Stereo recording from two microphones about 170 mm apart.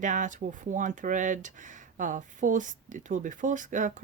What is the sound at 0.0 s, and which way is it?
Speech, 50° right (ahead or behind).